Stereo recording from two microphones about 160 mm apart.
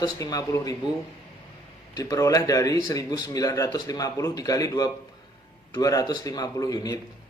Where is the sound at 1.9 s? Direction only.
20° left (ahead or behind).